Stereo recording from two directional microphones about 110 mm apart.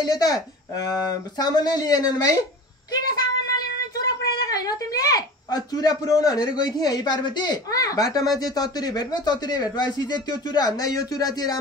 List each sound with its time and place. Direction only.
0.0 s speech: 35° left (ahead or behind)
2.9 s a sound: 35° left (ahead or behind)
6.4 s speech: 40° left (ahead or behind)